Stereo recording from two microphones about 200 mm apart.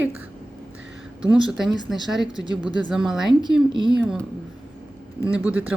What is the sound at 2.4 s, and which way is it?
Speech, 20° left (ahead or behind).